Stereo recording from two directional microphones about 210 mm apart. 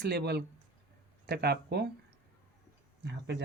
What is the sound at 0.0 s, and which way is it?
Speech, 50° right (ahead or behind).